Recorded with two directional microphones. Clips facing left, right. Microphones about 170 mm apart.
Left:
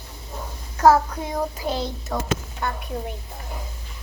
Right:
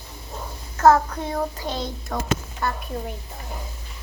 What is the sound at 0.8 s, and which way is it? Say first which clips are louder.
A child's voice: even; 10° left (ahead or behind).